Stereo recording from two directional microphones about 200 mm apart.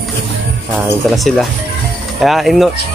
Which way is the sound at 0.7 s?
Centre (ahead or behind).